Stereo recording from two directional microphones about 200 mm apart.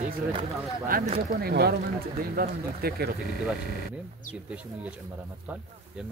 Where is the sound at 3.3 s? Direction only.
Centre (ahead or behind).